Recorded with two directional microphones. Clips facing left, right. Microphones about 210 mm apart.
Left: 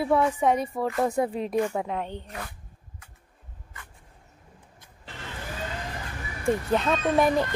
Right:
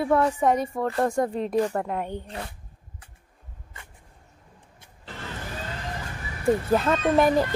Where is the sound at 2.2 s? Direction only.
30° right (ahead or behind).